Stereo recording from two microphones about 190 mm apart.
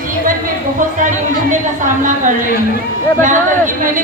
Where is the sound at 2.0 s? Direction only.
45° right (ahead or behind).